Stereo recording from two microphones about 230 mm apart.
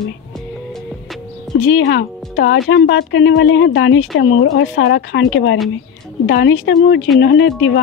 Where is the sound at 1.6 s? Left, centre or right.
Left.